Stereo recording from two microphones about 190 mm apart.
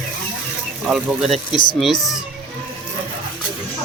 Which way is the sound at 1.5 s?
25° left (ahead or behind).